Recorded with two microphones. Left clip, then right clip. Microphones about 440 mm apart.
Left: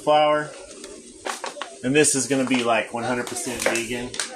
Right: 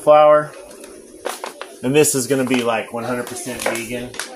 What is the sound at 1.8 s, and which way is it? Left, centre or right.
Speech, right.